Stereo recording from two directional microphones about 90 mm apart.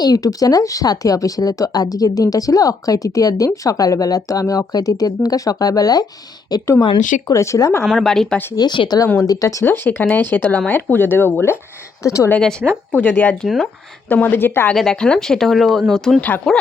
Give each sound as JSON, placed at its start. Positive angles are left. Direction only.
{"t": 0.0, "sound": "speech", "side_deg": 45}
{"t": 6.8, "sound": "speech", "side_deg": 55}
{"t": 7.3, "sound": "speech", "side_deg": 35}
{"t": 7.9, "sound": "speech", "side_deg": 0}
{"t": 8.5, "sound": "speech", "side_deg": 55}
{"t": 9.2, "sound": "speech", "side_deg": 40}
{"t": 9.6, "sound": "speech", "side_deg": 25}
{"t": 12.0, "sound": "speech", "side_deg": 35}
{"t": 12.4, "sound": "a woman's voice", "side_deg": 5}
{"t": 12.9, "sound": "speech", "side_deg": 20}
{"t": 14.8, "sound": "speech", "side_deg": 10}